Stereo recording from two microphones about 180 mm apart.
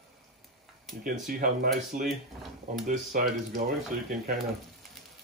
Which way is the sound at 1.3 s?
55° right (ahead or behind).